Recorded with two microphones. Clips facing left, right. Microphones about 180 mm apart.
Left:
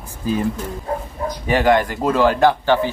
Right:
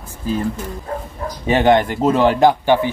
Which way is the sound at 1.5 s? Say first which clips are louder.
Right 2 dB; 25° right (ahead or behind).